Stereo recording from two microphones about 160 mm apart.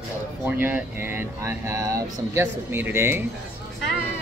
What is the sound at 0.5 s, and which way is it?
Speech, 10° right (ahead or behind).